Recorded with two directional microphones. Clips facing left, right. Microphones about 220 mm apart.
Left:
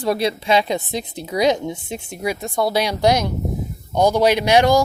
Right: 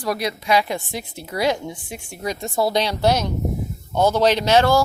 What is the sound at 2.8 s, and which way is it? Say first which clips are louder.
Speech: left 2 dB; 15° left (ahead or behind).